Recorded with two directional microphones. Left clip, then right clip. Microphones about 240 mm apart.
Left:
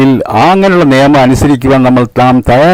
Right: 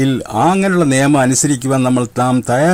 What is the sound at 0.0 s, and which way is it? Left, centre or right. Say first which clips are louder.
A man's voice: left 7 dB; left.